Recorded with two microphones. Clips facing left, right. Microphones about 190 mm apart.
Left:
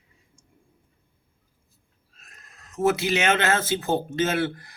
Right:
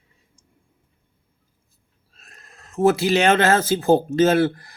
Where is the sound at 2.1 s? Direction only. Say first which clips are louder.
Right 4 dB; 30° right (ahead or behind).